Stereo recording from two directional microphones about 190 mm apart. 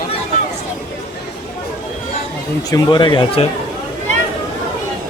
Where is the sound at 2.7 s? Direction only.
25° left (ahead or behind).